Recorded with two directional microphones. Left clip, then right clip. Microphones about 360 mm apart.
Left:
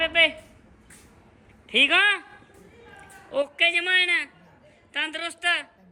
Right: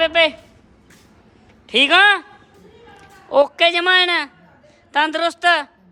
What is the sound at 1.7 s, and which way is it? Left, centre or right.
Speech, centre.